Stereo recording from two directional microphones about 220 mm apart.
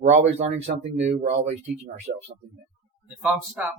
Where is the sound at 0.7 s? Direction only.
40° right (ahead or behind).